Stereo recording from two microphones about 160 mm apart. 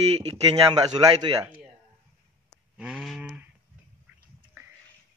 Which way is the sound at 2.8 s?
5° right (ahead or behind).